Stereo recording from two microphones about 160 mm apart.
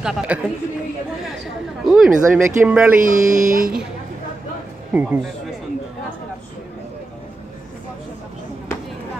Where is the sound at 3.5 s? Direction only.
60° right (ahead or behind).